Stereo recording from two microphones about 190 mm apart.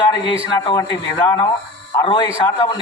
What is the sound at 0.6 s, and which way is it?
Speech, 15° left (ahead or behind).